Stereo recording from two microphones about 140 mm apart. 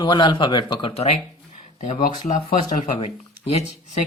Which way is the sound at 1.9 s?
65° left (ahead or behind).